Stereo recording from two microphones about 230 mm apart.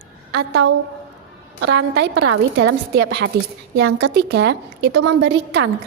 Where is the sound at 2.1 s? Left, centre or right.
Right.